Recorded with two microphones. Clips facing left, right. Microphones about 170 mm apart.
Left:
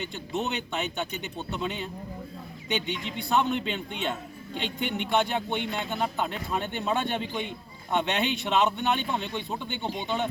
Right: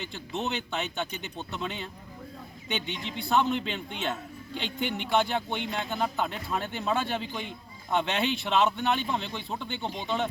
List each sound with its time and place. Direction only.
0.3 s speech: centre (ahead or behind)
2.8 s speech: 40° right (ahead or behind)
3.2 s speech: centre (ahead or behind)